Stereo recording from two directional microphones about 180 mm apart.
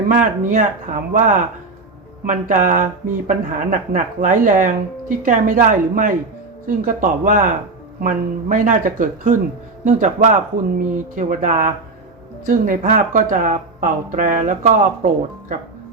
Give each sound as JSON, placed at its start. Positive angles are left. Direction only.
{"t": 0.1, "sound": "speech", "side_deg": -45}